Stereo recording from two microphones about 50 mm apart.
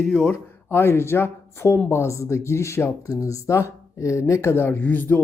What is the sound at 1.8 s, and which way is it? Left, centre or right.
Speech, left.